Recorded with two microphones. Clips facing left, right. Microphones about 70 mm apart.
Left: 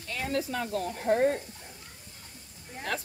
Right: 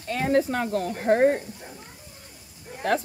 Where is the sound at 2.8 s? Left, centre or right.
Right.